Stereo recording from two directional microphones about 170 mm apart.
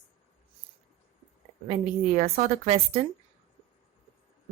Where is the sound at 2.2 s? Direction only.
45° right (ahead or behind).